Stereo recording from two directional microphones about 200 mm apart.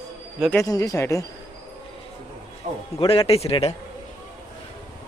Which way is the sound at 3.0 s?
30° left (ahead or behind).